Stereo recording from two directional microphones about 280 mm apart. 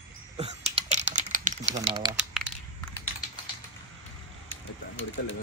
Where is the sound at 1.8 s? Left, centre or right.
Centre.